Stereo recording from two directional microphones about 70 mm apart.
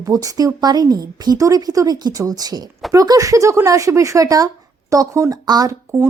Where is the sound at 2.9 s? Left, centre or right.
Right.